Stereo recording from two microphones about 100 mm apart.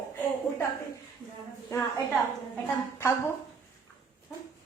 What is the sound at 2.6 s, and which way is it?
Speech, 25° left (ahead or behind).